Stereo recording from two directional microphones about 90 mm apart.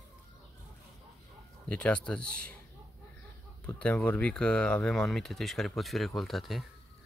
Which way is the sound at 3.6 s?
15° left (ahead or behind).